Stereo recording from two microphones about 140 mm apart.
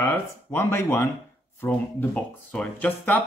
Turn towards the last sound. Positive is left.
turn(degrees=10)  # may be behind; listen again after turning